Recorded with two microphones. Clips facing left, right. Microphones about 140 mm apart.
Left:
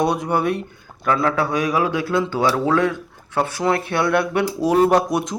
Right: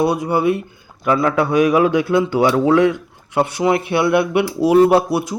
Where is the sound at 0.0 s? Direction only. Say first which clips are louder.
Right 3 dB; 5° right (ahead or behind).